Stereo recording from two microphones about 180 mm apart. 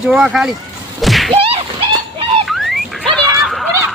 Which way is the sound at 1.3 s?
30° right (ahead or behind).